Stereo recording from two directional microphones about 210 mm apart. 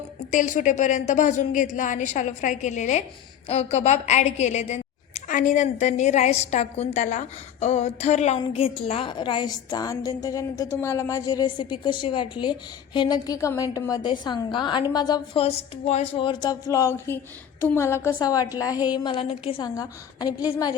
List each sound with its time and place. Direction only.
0.3 s a woman's voice: 35° left (ahead or behind); by 20.7 s 20° left (ahead or behind)